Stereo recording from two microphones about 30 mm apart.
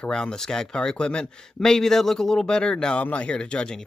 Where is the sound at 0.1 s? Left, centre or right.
Left.